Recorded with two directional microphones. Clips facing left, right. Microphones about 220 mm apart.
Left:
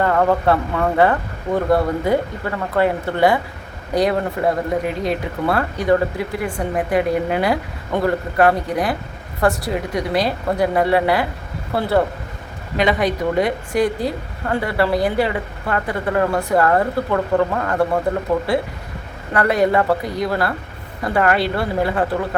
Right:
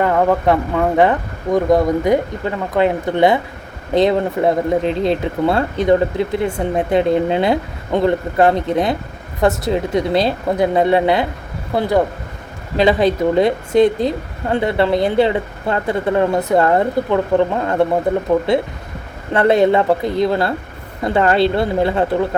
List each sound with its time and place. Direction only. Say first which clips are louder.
0.0 s a woman's voice: right 2 dB; 15° right (ahead or behind)
12.7 s a woman's voice: right 4 dB; 30° right (ahead or behind)